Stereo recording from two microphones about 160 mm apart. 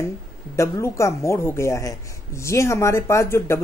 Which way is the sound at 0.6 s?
20° left (ahead or behind).